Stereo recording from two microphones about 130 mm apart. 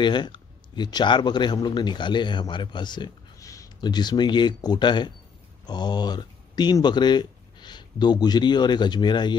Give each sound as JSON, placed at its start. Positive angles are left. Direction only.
{"t": 0.0, "sound": "a man's voice", "side_deg": 35}